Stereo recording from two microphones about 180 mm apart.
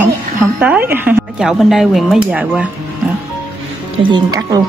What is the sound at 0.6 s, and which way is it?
Speech, 10° right (ahead or behind).